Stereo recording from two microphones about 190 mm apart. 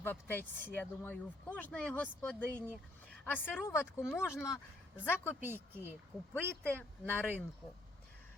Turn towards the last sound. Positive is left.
turn(degrees=10)  # may be behind; listen again after turning